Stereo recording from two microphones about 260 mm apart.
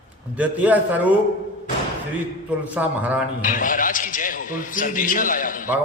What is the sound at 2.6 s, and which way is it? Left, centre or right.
Speech, centre.